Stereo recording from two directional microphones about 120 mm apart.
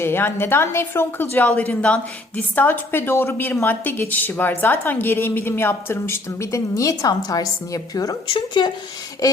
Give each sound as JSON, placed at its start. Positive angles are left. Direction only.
{"t": 0.0, "sound": "a woman's voice", "side_deg": 20}